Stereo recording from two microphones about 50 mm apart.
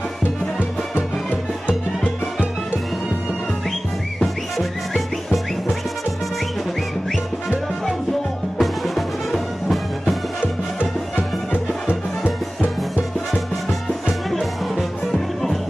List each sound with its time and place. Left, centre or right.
0.2 s music: left
4.6 s music: centre
8.5 s music: centre
11.5 s music: left
13.3 s music: centre